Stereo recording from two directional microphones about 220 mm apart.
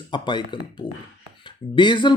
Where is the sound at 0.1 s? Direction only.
20° left (ahead or behind).